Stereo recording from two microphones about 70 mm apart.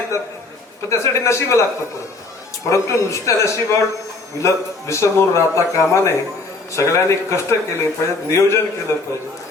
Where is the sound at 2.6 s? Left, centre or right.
Left.